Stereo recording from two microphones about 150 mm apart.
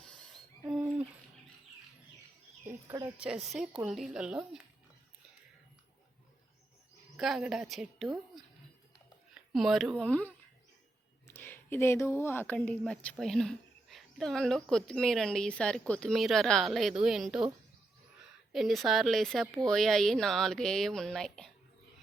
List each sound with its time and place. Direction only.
0.7 s a sound: 5° right (ahead or behind)
2.6 s speech: 20° right (ahead or behind)
3.4 s speech: centre (ahead or behind)
7.2 s speech: 5° right (ahead or behind)
9.3 s a sound: centre (ahead or behind)
10.0 s speech: 10° left (ahead or behind)
18.5 s speech: centre (ahead or behind)